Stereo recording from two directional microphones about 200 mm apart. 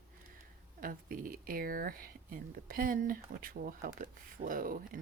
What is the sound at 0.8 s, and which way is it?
Speech, 45° right (ahead or behind).